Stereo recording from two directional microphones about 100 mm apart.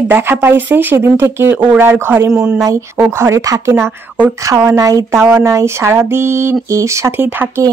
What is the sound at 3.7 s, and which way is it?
Speech, 20° right (ahead or behind).